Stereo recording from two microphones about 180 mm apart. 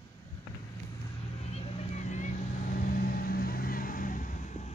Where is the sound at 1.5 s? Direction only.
40° left (ahead or behind).